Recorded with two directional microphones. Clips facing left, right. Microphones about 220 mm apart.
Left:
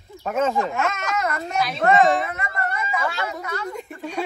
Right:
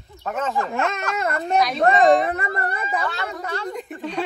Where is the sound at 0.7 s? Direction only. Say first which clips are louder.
Even; 35° right (ahead or behind).